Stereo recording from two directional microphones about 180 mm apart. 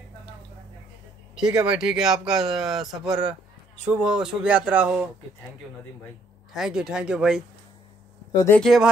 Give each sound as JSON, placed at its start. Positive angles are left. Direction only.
{"t": 1.3, "sound": "speech", "side_deg": -5}
{"t": 6.5, "sound": "speech", "side_deg": -5}
{"t": 8.3, "sound": "speech", "side_deg": 20}
{"t": 8.5, "sound": "speech", "side_deg": 0}